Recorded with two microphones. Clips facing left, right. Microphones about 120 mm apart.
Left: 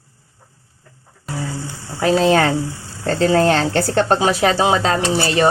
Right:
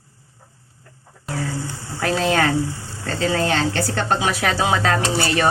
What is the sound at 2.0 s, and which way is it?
Speech, 20° left (ahead or behind).